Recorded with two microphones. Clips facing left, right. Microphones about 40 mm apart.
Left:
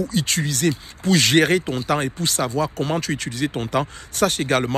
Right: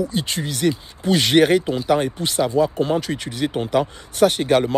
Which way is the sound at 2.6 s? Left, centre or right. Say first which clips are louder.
Right 6 dB; left.